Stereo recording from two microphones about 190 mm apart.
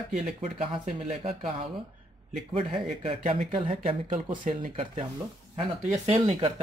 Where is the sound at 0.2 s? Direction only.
35° right (ahead or behind).